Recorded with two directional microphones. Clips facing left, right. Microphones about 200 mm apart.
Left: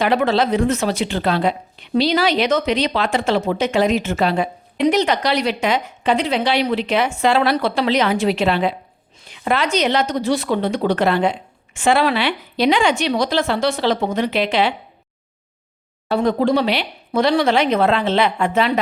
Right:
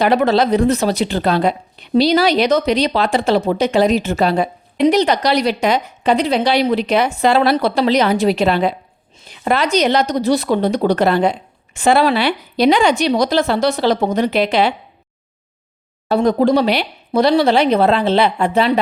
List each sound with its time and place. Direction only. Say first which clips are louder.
0.0 s speech: right 3 dB; 40° right (ahead or behind)
16.0 s speech: right 3 dB; 40° right (ahead or behind)